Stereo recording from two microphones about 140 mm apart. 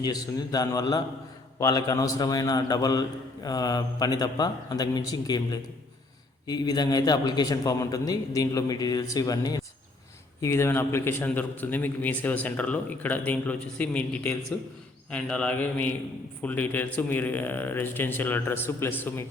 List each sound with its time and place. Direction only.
0.0 s a man's voice: 30° left (ahead or behind)